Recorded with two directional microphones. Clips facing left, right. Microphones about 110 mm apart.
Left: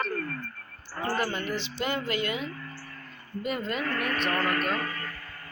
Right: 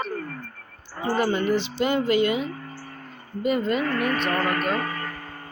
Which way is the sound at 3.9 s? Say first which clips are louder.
Right 4 dB; 40° right (ahead or behind).